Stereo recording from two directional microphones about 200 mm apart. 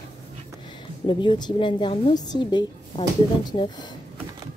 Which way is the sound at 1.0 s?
25° left (ahead or behind).